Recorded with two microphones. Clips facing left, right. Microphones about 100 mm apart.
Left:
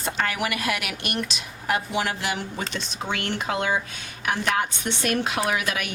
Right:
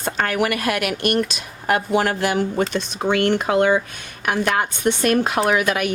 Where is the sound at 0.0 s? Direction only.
50° right (ahead or behind).